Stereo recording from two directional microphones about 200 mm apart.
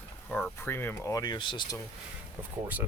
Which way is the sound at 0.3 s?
5° left (ahead or behind).